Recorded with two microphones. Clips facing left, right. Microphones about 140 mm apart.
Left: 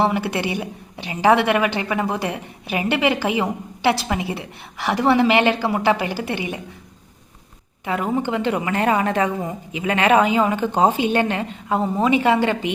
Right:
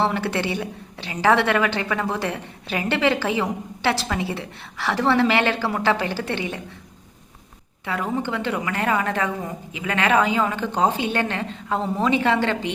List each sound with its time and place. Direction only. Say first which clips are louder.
0.0 s a woman's voice: left 2 dB; 15° left (ahead or behind)
7.9 s a woman's voice: left 3 dB; 15° left (ahead or behind)